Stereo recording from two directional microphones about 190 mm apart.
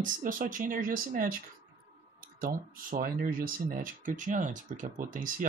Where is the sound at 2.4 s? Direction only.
50° right (ahead or behind).